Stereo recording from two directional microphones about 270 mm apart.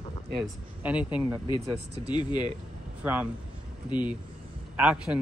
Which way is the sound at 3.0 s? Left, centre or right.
Centre.